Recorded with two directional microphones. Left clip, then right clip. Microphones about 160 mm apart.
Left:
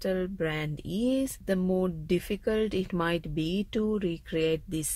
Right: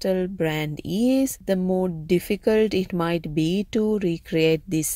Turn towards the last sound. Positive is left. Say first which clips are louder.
# right 8 dB
turn(degrees=-30)  # may be behind; listen again after turning